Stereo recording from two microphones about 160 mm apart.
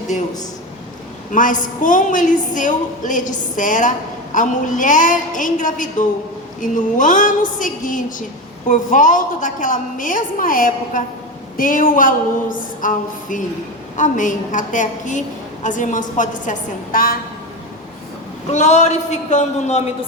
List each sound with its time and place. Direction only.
1.3 s a woman's voice: 55° left (ahead or behind)
18.5 s a woman's voice: 45° left (ahead or behind)